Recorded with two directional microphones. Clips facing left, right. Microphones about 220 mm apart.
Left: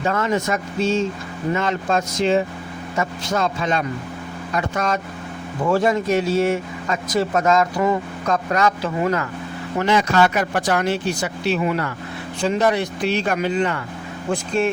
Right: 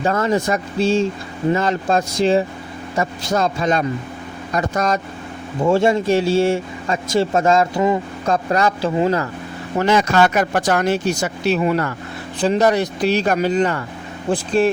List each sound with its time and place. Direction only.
0.0 s speech: 35° right (ahead or behind)
5.6 s speech: 25° right (ahead or behind)
8.3 s speech: 30° right (ahead or behind)
9.7 s speech: 45° right (ahead or behind)